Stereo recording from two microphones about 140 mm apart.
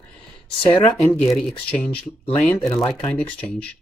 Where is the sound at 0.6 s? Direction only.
40° left (ahead or behind).